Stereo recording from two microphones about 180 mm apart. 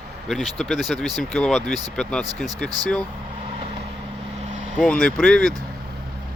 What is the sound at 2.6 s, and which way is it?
Speech, 20° right (ahead or behind).